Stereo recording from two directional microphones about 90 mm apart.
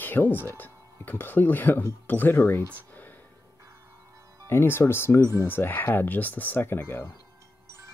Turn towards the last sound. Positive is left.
turn(degrees=20)  # may be behind; listen again after turning